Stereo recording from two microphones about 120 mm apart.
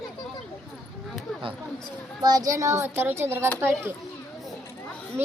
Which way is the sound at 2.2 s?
30° right (ahead or behind).